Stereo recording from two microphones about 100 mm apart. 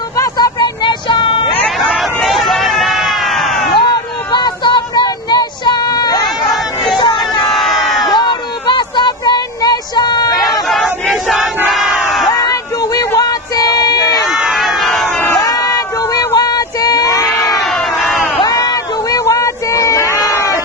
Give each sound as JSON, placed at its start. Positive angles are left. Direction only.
{"t": 0.3, "sound": "vehicle", "side_deg": 45}
{"t": 1.6, "sound": "hubbub", "side_deg": 0}
{"t": 2.2, "sound": "run", "side_deg": 0}
{"t": 4.3, "sound": "child singing", "side_deg": 45}
{"t": 6.5, "sound": "crowd", "side_deg": 0}
{"t": 8.1, "sound": "a sound", "side_deg": 50}
{"t": 10.3, "sound": "hubbub", "side_deg": 0}
{"t": 11.1, "sound": "battle cry", "side_deg": 0}
{"t": 11.7, "sound": "crowd", "side_deg": -5}
{"t": 12.3, "sound": "a sound", "side_deg": 40}
{"t": 14.3, "sound": "crowd", "side_deg": -5}
{"t": 15.4, "sound": "a sound", "side_deg": 40}
{"t": 17.7, "sound": "crowd", "side_deg": 0}
{"t": 18.4, "sound": "a sound", "side_deg": 40}